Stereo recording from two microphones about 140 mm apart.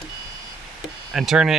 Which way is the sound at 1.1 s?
5° right (ahead or behind).